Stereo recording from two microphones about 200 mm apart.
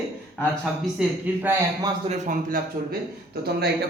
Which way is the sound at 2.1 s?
40° right (ahead or behind).